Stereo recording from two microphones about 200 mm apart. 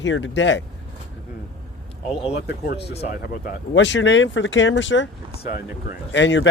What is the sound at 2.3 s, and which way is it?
Speech, 55° left (ahead or behind).